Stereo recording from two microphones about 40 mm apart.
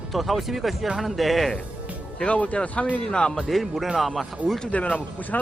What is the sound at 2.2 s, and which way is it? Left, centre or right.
Speech, left.